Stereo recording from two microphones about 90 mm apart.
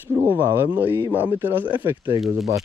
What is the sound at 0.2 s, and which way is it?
Speech, 25° right (ahead or behind).